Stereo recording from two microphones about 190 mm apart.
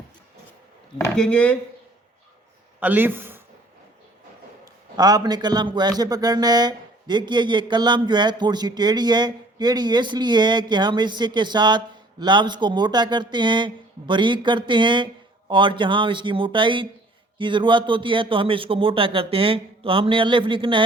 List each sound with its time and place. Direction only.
1.1 s speech: 5° left (ahead or behind)
2.8 s a man's voice: 10° right (ahead or behind)
4.6 s a man's voice: 20° right (ahead or behind)